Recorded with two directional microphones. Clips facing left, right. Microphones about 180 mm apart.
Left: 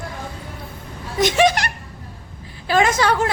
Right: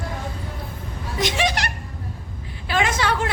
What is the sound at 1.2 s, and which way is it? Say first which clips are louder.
A woman's voice: left 7 dB; 45° left (ahead or behind).